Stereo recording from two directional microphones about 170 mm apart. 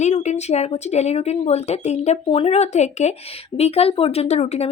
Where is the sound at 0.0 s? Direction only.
40° left (ahead or behind).